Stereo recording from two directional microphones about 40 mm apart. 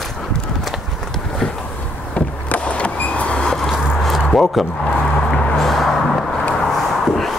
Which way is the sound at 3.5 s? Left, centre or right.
Centre.